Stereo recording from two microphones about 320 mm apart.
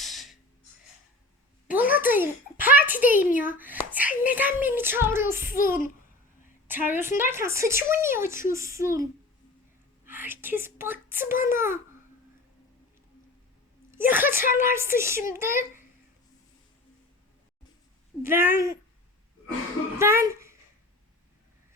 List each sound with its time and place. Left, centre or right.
0.0 s a sound: centre
1.6 s a sound: centre
3.6 s a woman's voice: centre
6.7 s a woman's voice: centre
10.1 s a woman's voice: centre
13.9 s a woman's voice: centre
18.2 s a woman's voice: centre
20.0 s a child's voice: centre